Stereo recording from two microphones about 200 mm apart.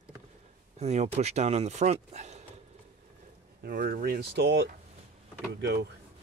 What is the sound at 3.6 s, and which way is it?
Speech, 45° right (ahead or behind).